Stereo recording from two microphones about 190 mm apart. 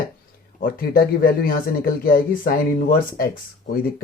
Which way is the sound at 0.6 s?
50° left (ahead or behind).